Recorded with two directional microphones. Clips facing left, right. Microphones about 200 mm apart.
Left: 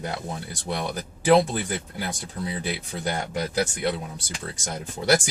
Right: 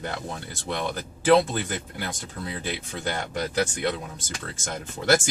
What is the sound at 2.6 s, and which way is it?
Speech, 10° left (ahead or behind).